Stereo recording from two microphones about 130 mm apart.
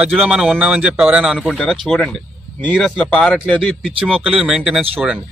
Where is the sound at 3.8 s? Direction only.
5° right (ahead or behind).